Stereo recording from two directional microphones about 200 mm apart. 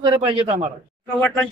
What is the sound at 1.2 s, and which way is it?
Speech, 5° left (ahead or behind).